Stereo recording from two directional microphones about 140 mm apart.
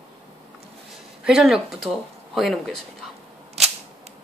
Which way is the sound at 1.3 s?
5° right (ahead or behind).